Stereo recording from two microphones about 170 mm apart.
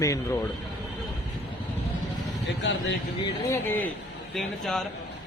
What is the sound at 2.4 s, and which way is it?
Speech, 90° left.